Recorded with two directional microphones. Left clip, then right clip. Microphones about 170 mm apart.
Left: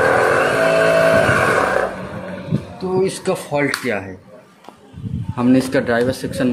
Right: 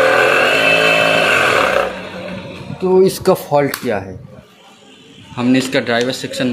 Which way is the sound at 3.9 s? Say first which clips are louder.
Right 3 dB; 15° right (ahead or behind).